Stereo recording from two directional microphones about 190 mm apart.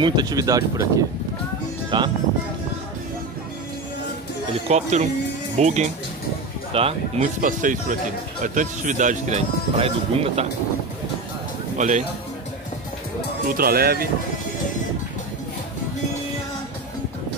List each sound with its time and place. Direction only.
0.0 s speech: 20° right (ahead or behind)
4.6 s speech: 35° right (ahead or behind)
7.4 s speech: 45° right (ahead or behind)
13.5 s speech: 50° right (ahead or behind)